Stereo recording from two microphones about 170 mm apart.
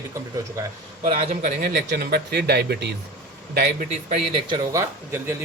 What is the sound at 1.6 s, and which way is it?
Speech, 60° right (ahead or behind).